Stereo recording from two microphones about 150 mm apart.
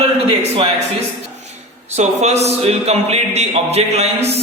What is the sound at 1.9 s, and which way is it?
Speech, 45° right (ahead or behind).